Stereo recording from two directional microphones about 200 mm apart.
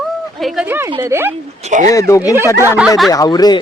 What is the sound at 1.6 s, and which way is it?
Speech, 35° right (ahead or behind).